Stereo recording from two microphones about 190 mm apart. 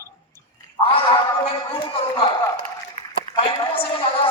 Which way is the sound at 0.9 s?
25° left (ahead or behind).